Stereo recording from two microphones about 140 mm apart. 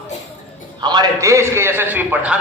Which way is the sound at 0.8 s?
30° right (ahead or behind).